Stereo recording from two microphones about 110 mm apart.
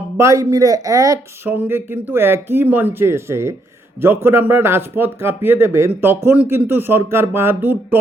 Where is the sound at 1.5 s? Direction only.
20° right (ahead or behind).